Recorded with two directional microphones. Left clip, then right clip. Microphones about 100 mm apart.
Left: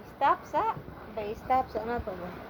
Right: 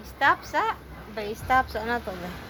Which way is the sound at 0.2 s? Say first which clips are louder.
Right 4 dB; 15° right (ahead or behind).